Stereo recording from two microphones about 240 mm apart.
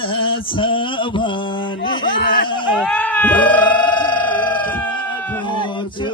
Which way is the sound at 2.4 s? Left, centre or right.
Centre.